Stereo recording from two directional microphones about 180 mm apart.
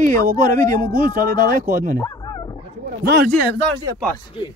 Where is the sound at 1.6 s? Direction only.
45° right (ahead or behind).